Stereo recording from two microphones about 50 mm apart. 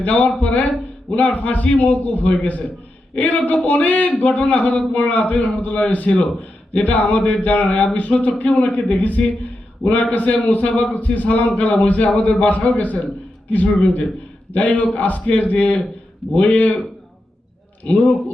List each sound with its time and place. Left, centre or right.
0.0 s a man's voice: left
17.8 s speech: left